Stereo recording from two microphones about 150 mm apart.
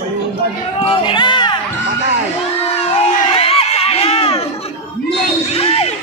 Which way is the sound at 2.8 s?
40° left (ahead or behind).